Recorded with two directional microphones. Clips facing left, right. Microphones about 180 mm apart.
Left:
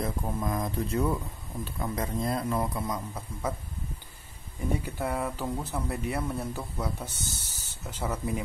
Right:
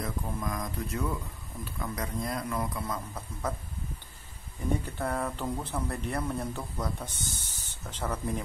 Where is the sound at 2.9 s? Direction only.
10° left (ahead or behind).